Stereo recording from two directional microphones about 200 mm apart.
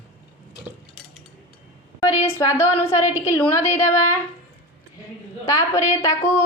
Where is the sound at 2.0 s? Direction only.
15° left (ahead or behind).